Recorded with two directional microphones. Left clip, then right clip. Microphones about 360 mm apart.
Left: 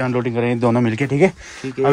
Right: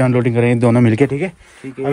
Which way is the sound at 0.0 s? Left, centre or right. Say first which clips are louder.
Right 5 dB; centre.